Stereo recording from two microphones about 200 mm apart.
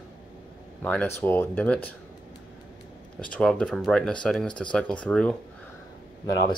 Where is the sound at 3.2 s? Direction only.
5° left (ahead or behind).